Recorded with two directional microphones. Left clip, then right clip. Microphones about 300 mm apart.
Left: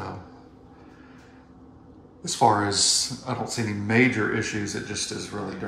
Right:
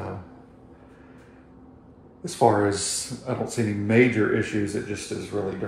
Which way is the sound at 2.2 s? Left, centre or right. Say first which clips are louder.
Even; centre.